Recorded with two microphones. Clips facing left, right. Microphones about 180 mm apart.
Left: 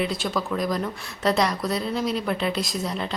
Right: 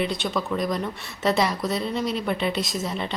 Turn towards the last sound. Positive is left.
turn(degrees=0)  # may be behind; listen again after turning